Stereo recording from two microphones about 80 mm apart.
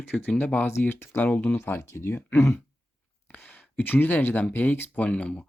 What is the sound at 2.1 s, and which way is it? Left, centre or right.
Speech, centre.